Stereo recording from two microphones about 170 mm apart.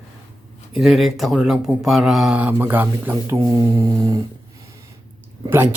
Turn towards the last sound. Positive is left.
turn(degrees=-10)  # may be behind; listen again after turning